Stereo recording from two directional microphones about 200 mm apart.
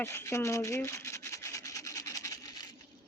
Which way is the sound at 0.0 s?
15° left (ahead or behind).